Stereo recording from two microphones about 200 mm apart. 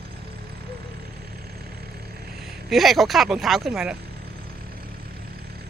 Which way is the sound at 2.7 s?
Centre (ahead or behind).